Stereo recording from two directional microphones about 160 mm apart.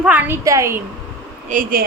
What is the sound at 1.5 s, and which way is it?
Speech, 55° right (ahead or behind).